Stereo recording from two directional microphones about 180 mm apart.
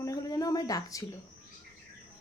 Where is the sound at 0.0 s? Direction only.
20° left (ahead or behind).